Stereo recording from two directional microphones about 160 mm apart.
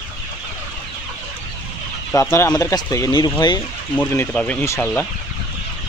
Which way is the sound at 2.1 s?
15° left (ahead or behind).